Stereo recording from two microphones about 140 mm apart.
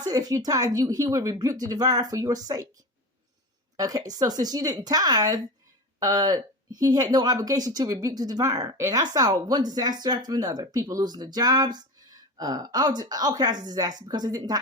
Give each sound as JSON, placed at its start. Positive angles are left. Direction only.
{"t": 0.0, "sound": "speech", "side_deg": -25}
{"t": 3.8, "sound": "speech", "side_deg": -25}